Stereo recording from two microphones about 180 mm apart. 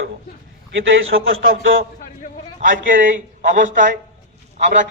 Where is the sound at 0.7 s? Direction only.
90° right.